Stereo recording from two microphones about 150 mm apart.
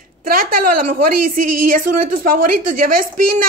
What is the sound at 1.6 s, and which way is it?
A woman's voice, 65° right (ahead or behind).